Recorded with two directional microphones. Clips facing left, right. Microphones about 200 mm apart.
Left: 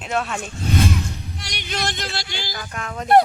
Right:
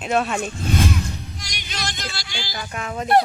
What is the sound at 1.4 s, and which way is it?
Music, 60° left (ahead or behind).